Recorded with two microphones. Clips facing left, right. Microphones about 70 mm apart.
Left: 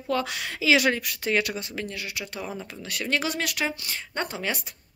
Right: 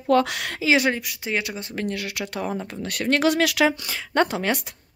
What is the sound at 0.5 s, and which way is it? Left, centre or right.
Speech, right.